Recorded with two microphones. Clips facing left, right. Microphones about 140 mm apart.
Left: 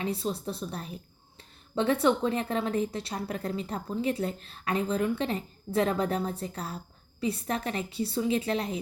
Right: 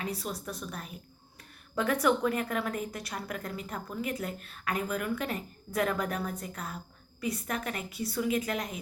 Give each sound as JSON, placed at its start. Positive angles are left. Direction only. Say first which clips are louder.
{"t": 0.0, "sound": "a woman's voice", "louder": "left 5 dB", "side_deg": 30}